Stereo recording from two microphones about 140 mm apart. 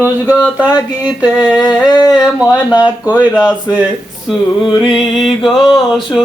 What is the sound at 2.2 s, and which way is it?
Speech, 10° right (ahead or behind).